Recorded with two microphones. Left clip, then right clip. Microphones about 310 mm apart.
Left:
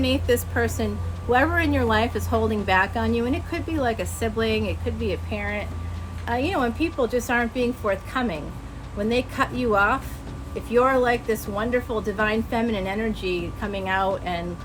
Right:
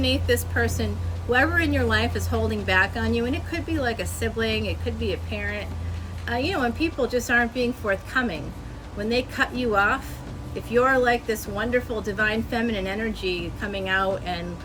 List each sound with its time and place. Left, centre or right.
0.0 s a woman's voice: centre